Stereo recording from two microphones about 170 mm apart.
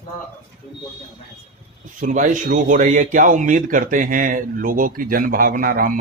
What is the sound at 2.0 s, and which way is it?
A man's voice, 50° right (ahead or behind).